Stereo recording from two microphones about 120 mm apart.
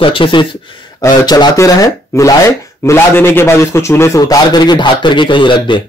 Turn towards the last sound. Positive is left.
turn(degrees=40)  # may be behind; listen again after turning